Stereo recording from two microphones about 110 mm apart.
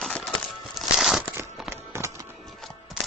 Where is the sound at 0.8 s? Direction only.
Centre (ahead or behind).